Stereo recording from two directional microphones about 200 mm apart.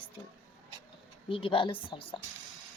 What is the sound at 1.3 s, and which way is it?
Speech, 25° left (ahead or behind).